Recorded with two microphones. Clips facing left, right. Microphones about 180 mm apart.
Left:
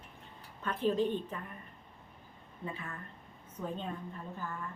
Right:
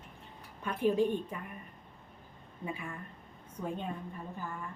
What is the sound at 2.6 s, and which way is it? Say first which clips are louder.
Speech: right 2 dB; 10° right (ahead or behind).